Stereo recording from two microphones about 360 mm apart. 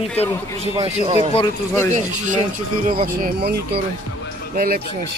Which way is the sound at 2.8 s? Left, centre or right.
Right.